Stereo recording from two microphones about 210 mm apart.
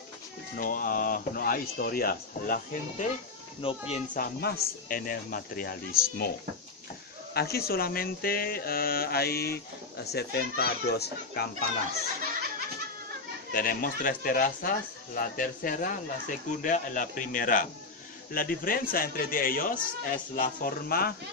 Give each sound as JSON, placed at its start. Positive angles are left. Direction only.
{"t": 0.6, "sound": "speech", "side_deg": 40}
{"t": 7.3, "sound": "speech", "side_deg": 50}
{"t": 13.5, "sound": "speech", "side_deg": 40}